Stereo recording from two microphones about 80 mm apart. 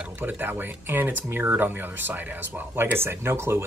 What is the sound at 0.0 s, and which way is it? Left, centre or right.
Speech, right.